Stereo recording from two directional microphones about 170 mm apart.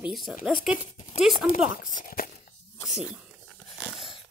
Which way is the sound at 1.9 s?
55° left (ahead or behind).